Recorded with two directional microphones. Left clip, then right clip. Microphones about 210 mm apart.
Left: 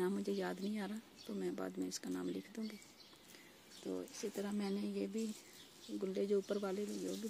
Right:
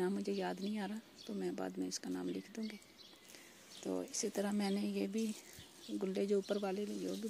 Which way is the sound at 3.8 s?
15° right (ahead or behind).